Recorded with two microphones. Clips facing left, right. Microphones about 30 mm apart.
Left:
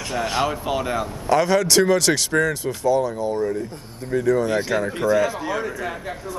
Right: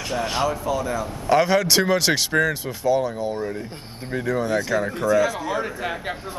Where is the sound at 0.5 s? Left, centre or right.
Left.